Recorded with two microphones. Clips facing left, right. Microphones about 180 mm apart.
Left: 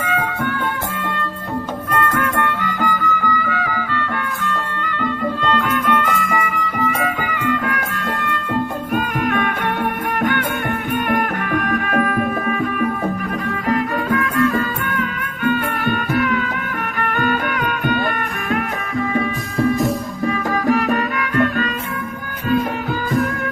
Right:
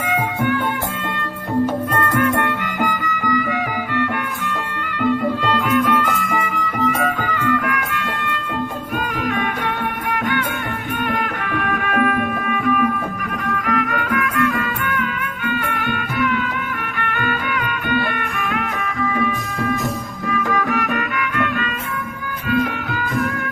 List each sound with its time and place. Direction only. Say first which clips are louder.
0.0 s music: right 1 dB; 15° right (ahead or behind)
2.0 s music: even; 15° right (ahead or behind)
5.0 s music: right 3 dB; 10° right (ahead or behind); by 7.6 s 15° left (ahead or behind)
7.7 s music: even; 40° left (ahead or behind)
9.2 s music: left 1 dB; 55° left (ahead or behind)
11.1 s music: left 4 dB; 45° left (ahead or behind)